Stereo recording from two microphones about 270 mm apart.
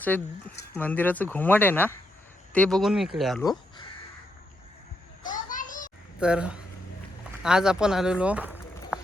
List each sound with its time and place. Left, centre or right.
0.0 s speech: centre
5.3 s children playing: left
6.1 s speech: centre